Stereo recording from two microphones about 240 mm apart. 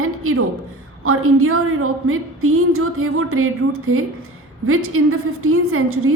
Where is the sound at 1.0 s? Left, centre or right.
Right.